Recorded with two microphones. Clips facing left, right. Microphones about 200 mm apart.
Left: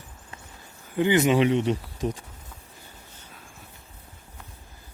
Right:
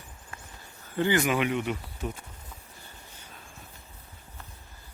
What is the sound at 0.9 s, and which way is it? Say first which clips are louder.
Speech: left 5 dB; 20° left (ahead or behind).